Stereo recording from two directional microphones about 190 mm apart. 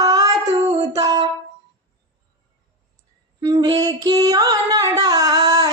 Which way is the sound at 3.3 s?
20° right (ahead or behind).